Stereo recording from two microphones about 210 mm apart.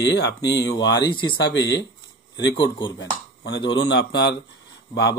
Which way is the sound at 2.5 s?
20° left (ahead or behind).